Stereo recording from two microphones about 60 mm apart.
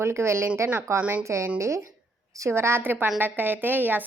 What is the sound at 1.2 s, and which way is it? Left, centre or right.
A woman's voice, right.